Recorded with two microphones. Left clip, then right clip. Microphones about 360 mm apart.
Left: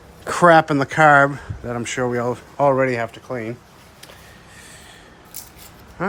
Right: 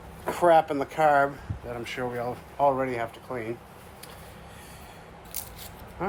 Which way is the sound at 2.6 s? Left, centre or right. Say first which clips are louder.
Left 7 dB; left.